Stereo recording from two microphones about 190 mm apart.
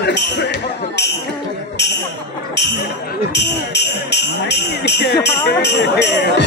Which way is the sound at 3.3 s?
65° left (ahead or behind).